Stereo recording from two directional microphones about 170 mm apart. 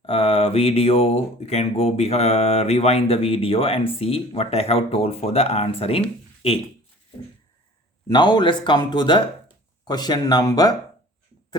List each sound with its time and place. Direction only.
0.0 s speech: 35° left (ahead or behind)
8.0 s speech: 25° left (ahead or behind)